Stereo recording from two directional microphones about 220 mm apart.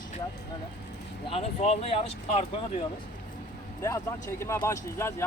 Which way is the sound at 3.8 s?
15° left (ahead or behind).